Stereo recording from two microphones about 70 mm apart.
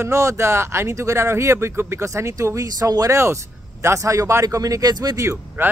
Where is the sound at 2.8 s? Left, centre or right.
Right.